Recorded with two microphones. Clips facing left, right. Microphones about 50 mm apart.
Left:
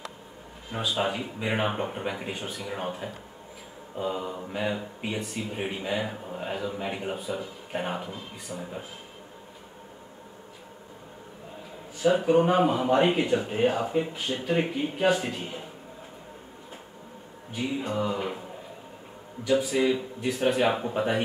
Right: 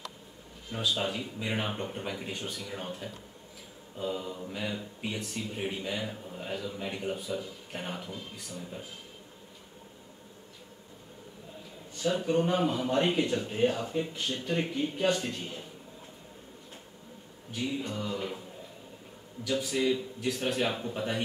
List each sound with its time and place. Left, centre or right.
0.7 s speech: centre
8.1 s speech: centre
8.5 s speech: left
12.2 s speech: centre
17.6 s speech: centre
19.4 s speech: centre